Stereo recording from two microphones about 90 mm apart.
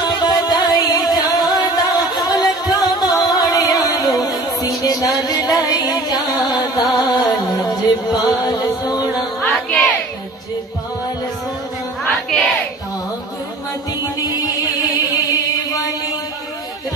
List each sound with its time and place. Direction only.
0.0 s music: 50° left (ahead or behind)
9.4 s music: 15° left (ahead or behind)
12.0 s music: 5° left (ahead or behind)
14.0 s music: 45° left (ahead or behind)